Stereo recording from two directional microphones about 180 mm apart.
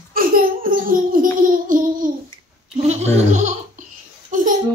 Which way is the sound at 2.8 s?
40° right (ahead or behind).